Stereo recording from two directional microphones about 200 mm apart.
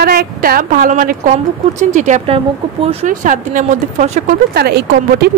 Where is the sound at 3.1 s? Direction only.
40° right (ahead or behind).